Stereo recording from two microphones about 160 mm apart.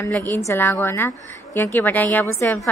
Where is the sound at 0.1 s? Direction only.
10° left (ahead or behind).